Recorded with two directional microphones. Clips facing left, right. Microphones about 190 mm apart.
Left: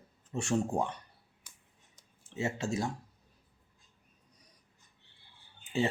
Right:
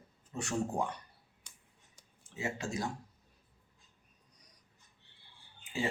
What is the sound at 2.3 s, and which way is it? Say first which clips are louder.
Speech: left 4 dB; 25° left (ahead or behind).